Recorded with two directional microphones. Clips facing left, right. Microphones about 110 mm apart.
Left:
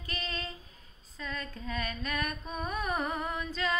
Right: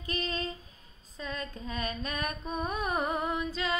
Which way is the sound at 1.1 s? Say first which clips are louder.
Right 2 dB; 25° right (ahead or behind).